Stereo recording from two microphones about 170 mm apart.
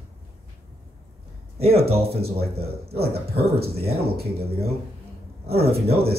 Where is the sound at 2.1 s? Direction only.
65° right (ahead or behind).